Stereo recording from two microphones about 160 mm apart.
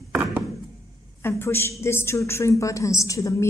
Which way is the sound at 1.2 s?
15° left (ahead or behind).